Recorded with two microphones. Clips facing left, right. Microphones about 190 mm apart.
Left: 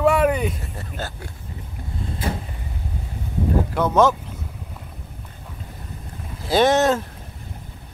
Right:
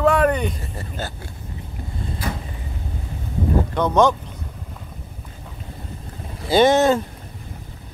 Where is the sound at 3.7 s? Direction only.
5° left (ahead or behind).